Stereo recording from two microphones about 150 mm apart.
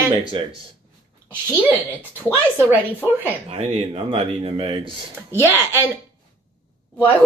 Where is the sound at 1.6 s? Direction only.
10° right (ahead or behind).